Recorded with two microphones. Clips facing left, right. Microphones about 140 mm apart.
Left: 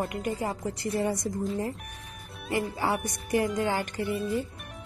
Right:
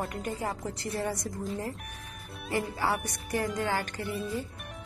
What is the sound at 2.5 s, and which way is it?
Speech, 15° left (ahead or behind).